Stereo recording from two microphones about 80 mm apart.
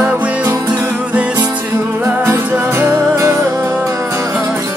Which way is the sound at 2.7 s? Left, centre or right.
Right.